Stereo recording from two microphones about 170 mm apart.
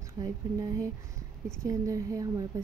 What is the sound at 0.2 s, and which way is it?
Speech, 20° right (ahead or behind).